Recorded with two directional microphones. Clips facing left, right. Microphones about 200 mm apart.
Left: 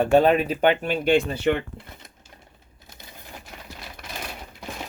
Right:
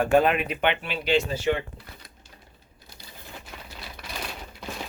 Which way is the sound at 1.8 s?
20° left (ahead or behind).